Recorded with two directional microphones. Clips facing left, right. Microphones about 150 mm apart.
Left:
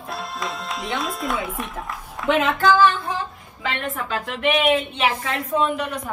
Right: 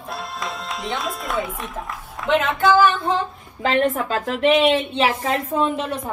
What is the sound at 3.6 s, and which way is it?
A woman's voice, 40° right (ahead or behind).